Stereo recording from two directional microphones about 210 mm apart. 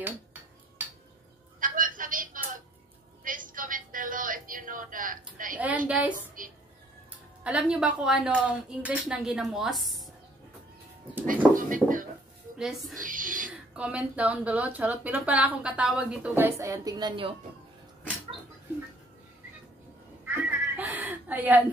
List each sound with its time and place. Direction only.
0.0 s dishes: 10° right (ahead or behind)
1.6 s a sound: 40° right (ahead or behind)
3.3 s a woman's voice: 40° right (ahead or behind)
5.9 s a woman's voice: 5° right (ahead or behind)
6.1 s speech: 40° right (ahead or behind)
7.4 s a woman's voice: 5° right (ahead or behind)
11.2 s speech: 40° right (ahead or behind)
12.5 s a woman's voice: centre (ahead or behind)
12.9 s speech: 40° right (ahead or behind)
13.7 s a woman's voice: 5° right (ahead or behind); by 17.4 s 25° right (ahead or behind)
20.2 s cat: 10° right (ahead or behind)